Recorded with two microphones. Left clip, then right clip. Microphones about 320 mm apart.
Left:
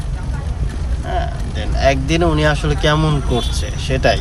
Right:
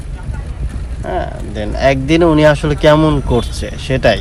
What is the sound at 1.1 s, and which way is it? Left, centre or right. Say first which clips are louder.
Speech: right 3 dB; centre.